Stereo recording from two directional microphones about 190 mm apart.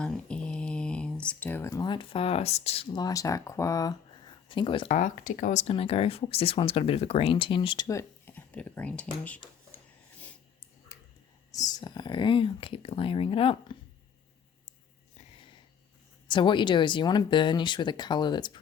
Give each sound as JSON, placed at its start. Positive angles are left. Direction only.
{"t": 0.0, "sound": "speech", "side_deg": 5}
{"t": 4.9, "sound": "speech", "side_deg": 45}
{"t": 10.9, "sound": "whispering", "side_deg": 15}
{"t": 11.5, "sound": "speech", "side_deg": 20}
{"t": 16.2, "sound": "speech", "side_deg": 25}